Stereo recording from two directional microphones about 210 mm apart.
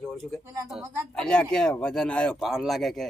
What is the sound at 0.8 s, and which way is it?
Speech, 10° right (ahead or behind).